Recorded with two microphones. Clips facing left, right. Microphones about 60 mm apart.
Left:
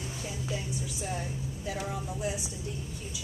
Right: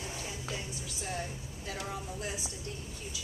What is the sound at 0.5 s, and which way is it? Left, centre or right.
A woman's voice, centre.